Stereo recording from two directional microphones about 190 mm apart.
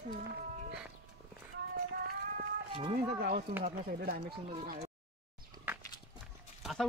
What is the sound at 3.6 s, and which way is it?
Speech, 50° right (ahead or behind).